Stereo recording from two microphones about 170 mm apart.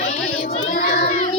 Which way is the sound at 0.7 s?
60° left (ahead or behind).